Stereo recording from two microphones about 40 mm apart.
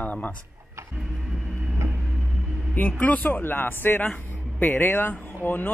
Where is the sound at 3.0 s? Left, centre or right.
Left.